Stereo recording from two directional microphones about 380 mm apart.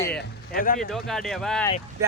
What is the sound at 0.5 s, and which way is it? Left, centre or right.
Speech, left.